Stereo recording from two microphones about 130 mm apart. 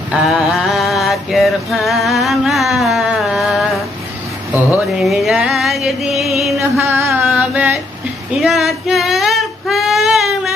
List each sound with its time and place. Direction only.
0.1 s mantra: centre (ahead or behind)
4.6 s a sound: 15° right (ahead or behind)
5.0 s music: centre (ahead or behind)
6.6 s music: 20° right (ahead or behind)
7.3 s a sound: 10° right (ahead or behind)
8.3 s female singing: centre (ahead or behind)